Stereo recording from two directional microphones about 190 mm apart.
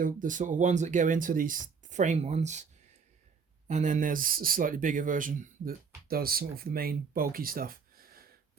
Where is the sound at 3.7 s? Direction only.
40° right (ahead or behind).